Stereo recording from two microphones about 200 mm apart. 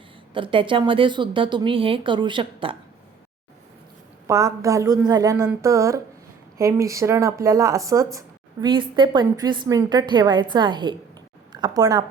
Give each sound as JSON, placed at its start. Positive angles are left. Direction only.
{"t": 0.3, "sound": "a woman's voice", "side_deg": -25}
{"t": 4.3, "sound": "a woman's voice", "side_deg": -15}